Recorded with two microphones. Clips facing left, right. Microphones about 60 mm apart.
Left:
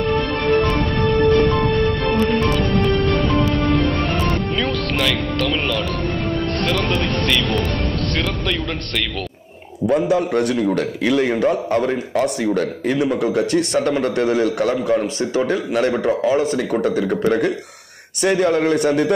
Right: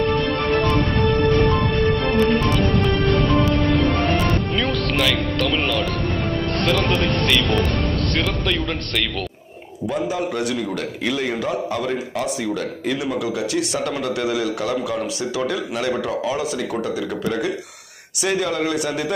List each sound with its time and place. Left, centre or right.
4.6 s speech: centre
9.8 s a man's voice: left